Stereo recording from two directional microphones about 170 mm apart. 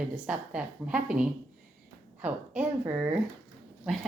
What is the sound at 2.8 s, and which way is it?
Speech, 10° right (ahead or behind).